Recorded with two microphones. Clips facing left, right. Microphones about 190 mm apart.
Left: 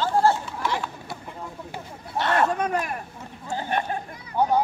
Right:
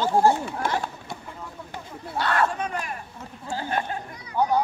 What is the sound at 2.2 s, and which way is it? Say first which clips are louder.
Chatter: left 1 dB; 20° left (ahead or behind).